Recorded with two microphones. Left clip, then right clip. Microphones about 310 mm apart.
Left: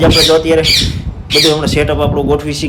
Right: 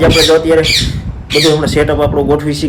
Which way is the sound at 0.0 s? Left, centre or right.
Centre.